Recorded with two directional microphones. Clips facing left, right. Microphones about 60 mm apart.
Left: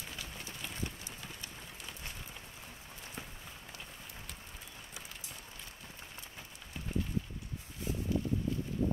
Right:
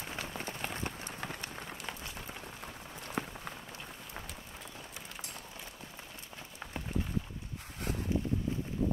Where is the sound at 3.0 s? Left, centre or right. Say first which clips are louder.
Right 10 dB; right.